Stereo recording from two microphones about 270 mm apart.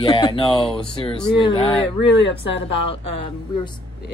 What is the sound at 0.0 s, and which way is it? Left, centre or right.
Speech, centre.